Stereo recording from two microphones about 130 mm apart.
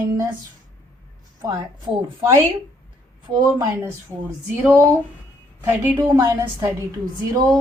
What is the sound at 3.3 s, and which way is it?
Speech, 45° right (ahead or behind).